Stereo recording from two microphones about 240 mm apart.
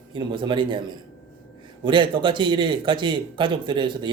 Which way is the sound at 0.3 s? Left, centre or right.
Centre.